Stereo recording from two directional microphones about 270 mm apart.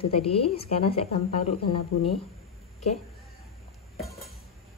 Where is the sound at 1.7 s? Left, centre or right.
Left.